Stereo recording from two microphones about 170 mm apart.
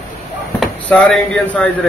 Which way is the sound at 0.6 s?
5° left (ahead or behind).